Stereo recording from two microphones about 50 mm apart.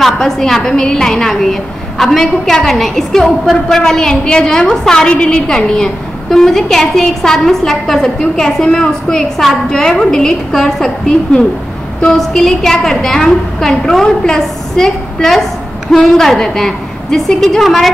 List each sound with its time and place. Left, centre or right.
0.0 s a woman's voice: centre